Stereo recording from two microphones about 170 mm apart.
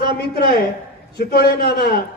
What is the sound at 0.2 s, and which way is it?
A man's voice, 70° left (ahead or behind).